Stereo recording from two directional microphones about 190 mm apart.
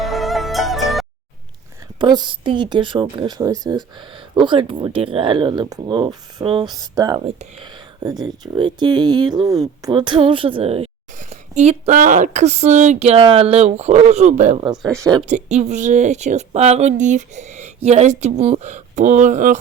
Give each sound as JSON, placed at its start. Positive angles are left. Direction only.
{"t": 0.0, "sound": "music", "side_deg": 0}
{"t": 2.0, "sound": "a woman's voice", "side_deg": -25}
{"t": 14.6, "sound": "a woman's voice", "side_deg": -20}
{"t": 15.3, "sound": "speech", "side_deg": -35}